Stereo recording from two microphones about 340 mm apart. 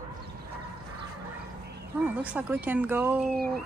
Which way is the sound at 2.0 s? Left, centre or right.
Centre.